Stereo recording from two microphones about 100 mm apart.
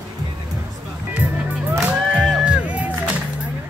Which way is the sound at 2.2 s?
5° right (ahead or behind).